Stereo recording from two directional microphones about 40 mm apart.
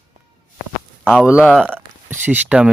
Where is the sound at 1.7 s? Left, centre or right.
Right.